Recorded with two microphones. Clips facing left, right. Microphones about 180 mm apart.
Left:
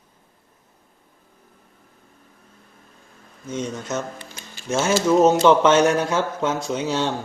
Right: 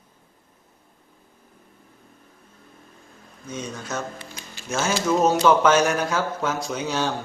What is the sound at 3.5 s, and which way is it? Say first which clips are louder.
Speech: left 4 dB; 25° left (ahead or behind).